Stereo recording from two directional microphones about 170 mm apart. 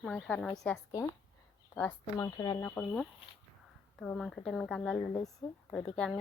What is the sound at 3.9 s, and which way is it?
Speech, 5° left (ahead or behind).